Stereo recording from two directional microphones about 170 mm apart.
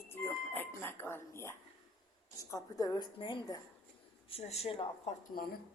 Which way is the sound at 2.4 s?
20° left (ahead or behind).